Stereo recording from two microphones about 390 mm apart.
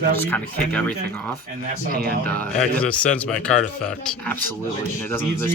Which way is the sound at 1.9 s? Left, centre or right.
Right.